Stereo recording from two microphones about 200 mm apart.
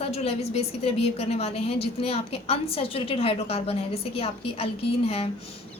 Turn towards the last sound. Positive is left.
turn(degrees=30)  # may be behind; listen again after turning